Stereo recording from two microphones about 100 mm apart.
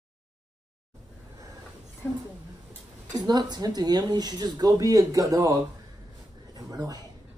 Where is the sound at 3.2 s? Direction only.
45° right (ahead or behind).